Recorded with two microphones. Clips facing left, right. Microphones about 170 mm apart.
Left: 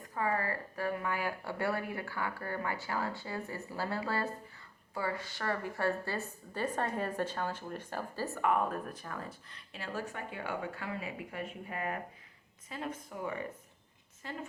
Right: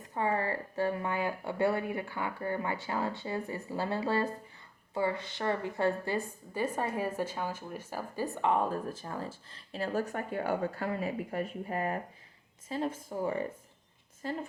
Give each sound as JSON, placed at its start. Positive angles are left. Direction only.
{"t": 0.0, "sound": "a woman's voice", "side_deg": -25}